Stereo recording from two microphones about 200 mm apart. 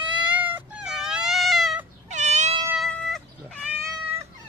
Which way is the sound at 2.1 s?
35° right (ahead or behind).